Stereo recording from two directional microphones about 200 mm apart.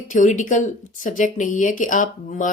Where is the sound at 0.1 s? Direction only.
40° left (ahead or behind).